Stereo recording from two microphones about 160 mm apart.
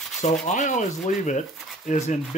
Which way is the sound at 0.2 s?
45° left (ahead or behind).